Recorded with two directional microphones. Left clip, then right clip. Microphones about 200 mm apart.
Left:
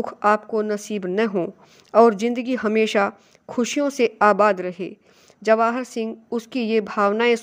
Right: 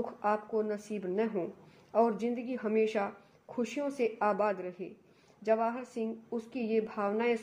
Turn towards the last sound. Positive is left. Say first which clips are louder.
# left 13 dB
turn(degrees=40)  # may be behind; listen again after turning